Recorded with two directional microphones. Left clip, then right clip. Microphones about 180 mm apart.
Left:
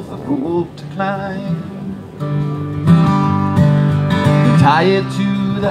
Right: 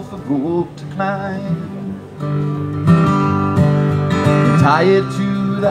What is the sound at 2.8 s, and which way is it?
Music, 30° left (ahead or behind).